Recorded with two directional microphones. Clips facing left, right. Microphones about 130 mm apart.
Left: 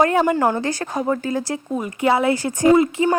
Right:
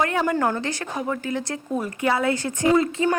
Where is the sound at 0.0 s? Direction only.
35° left (ahead or behind).